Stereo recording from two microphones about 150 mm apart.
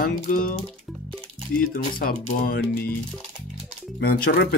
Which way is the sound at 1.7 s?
85° left.